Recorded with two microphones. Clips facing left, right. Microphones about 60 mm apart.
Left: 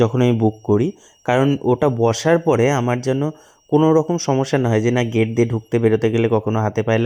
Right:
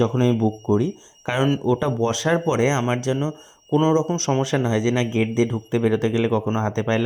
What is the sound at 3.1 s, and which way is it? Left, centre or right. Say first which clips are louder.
Speech: left 4 dB; left.